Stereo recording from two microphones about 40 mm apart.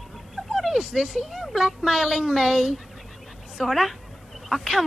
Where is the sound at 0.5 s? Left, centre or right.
Centre.